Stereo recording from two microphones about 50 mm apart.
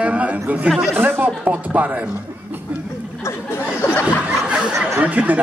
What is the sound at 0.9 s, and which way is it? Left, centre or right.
Speech, right.